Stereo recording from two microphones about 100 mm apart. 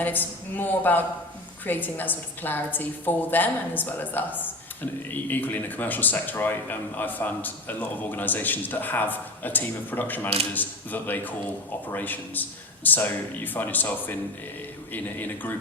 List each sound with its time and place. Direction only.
0.0 s a woman's voice: 20° left (ahead or behind)